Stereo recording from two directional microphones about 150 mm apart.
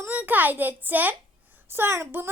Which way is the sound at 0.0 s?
10° right (ahead or behind).